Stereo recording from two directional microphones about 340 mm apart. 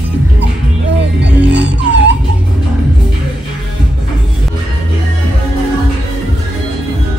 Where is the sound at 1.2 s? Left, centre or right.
Right.